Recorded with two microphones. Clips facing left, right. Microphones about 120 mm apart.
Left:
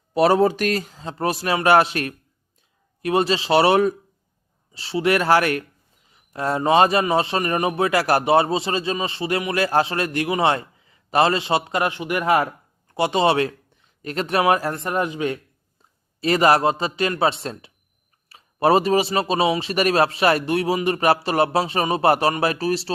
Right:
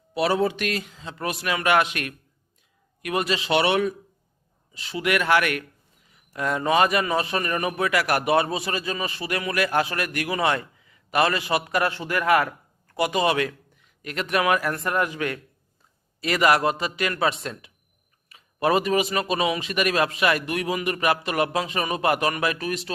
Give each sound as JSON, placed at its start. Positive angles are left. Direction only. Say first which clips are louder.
{"t": 0.1, "sound": "a man's voice", "louder": "left 6 dB", "side_deg": 40}